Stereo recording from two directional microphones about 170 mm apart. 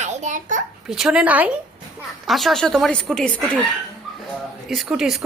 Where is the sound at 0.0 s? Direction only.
45° right (ahead or behind).